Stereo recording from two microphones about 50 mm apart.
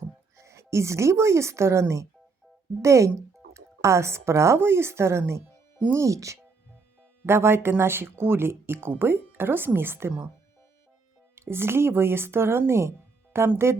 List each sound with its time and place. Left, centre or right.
0.3 s speech: right
2.8 s speech: right
5.9 s speech: right
7.3 s speech: right
11.3 s speech: right